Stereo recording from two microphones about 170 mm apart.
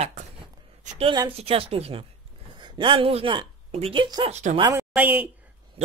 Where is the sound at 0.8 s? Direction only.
35° right (ahead or behind).